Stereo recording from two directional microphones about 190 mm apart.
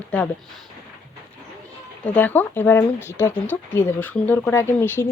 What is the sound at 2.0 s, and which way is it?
Speech, 10° left (ahead or behind).